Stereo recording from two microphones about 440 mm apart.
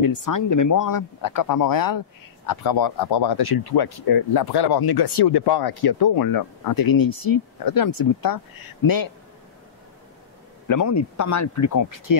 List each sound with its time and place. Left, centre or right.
0.0 s speech: left
10.7 s speech: left